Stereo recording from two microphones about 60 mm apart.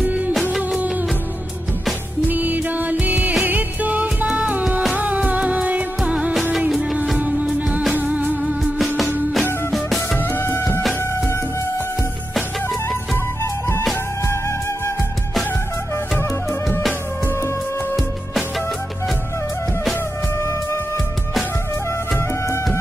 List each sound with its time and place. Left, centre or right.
0.0 s music of bollywood: right
2.2 s music: right
8.7 s music: centre
10.1 s music: left